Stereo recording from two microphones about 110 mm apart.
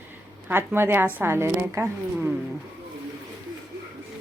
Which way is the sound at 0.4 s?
20° right (ahead or behind).